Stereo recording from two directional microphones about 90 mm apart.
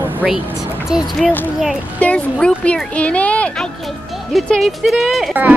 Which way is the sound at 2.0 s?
15° left (ahead or behind).